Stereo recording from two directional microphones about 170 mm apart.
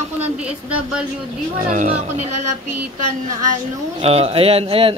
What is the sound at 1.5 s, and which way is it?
Speech, 50° right (ahead or behind).